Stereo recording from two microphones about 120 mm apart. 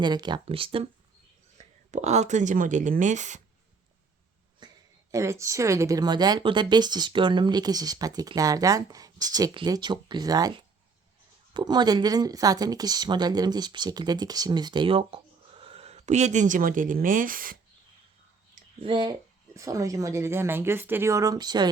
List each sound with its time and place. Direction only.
0.0 s speech: 40° right (ahead or behind)
0.4 s speech: 50° right (ahead or behind)
1.9 s speech: 70° right (ahead or behind); by 3.4 s 85° right
4.6 s a sound: 35° right (ahead or behind)
5.1 s speech: 25° right (ahead or behind)
11.5 s speech: 35° right (ahead or behind); by 17.2 s 90° right
18.8 s speech: 40° right (ahead or behind)
19.5 s speech: 25° right (ahead or behind)